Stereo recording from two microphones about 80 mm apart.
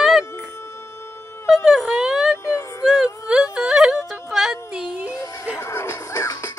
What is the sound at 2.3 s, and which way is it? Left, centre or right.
Child singing, left.